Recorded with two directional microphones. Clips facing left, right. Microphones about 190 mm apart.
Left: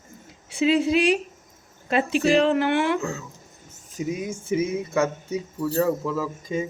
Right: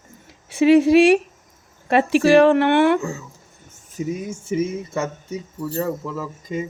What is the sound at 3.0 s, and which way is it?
Speech, 10° right (ahead or behind).